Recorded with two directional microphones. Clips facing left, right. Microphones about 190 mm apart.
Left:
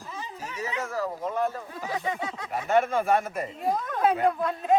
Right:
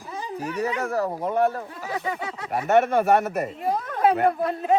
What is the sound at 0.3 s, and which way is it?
Speech, 60° right (ahead or behind).